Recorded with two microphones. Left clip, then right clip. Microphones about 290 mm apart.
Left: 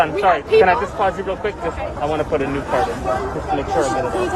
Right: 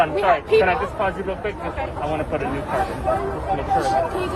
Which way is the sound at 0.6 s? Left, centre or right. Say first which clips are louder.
Left 4 dB; left.